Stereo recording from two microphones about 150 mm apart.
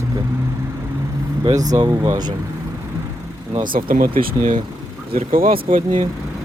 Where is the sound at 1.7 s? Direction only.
25° right (ahead or behind).